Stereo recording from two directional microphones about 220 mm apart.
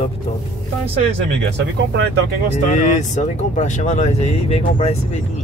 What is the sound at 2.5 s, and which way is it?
Speech, 35° left (ahead or behind).